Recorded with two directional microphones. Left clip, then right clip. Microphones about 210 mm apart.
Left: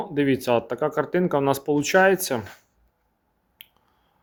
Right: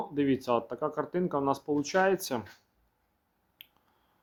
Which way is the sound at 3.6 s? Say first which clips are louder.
Left 5 dB; 5° left (ahead or behind).